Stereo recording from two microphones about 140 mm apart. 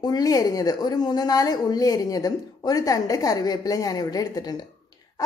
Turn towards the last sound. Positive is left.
turn(degrees=25)  # may be behind; listen again after turning